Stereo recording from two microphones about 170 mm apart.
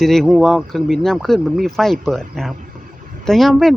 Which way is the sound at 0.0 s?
Centre (ahead or behind).